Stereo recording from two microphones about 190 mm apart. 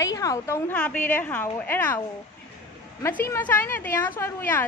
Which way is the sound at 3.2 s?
10° left (ahead or behind).